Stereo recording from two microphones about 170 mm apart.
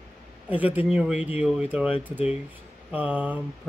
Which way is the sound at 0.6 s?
10° right (ahead or behind).